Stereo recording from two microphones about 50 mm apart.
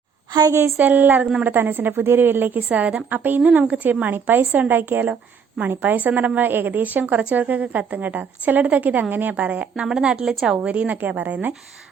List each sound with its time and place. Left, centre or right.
0.8 s a woman's voice: right
2.6 s a woman's voice: right
3.4 s a woman's voice: right
4.0 s a woman's voice: right
9.7 s a woman's voice: centre
10.7 s a woman's voice: right